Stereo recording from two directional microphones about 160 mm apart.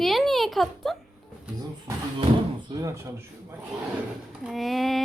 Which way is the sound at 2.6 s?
20° right (ahead or behind).